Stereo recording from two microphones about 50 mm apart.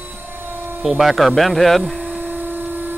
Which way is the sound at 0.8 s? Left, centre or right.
Centre.